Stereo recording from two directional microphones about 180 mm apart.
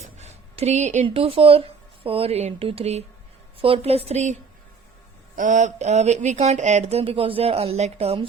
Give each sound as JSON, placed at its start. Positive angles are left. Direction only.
{"t": 0.2, "sound": "a sound", "side_deg": -35}
{"t": 1.0, "sound": "speech", "side_deg": -30}
{"t": 5.4, "sound": "speech", "side_deg": -40}